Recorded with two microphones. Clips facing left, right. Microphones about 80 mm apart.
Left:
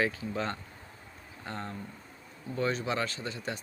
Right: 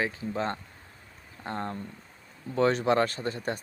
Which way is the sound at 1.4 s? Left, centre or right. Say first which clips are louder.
Right 5 dB; right.